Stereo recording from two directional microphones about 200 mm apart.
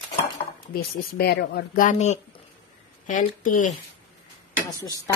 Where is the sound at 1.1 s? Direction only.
50° left (ahead or behind).